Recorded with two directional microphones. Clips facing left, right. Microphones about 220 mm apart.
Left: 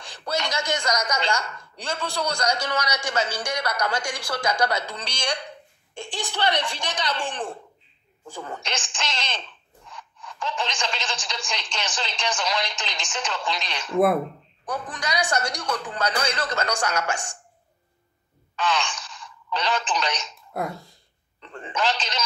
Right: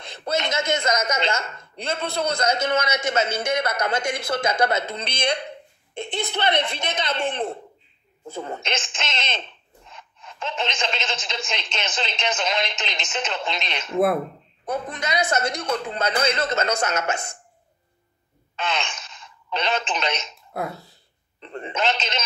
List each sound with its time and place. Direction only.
0.0 s a woman's voice: 20° right (ahead or behind)
18.6 s speech: 20° right (ahead or behind)
20.5 s a sound: centre (ahead or behind)
21.4 s telephone: 20° right (ahead or behind)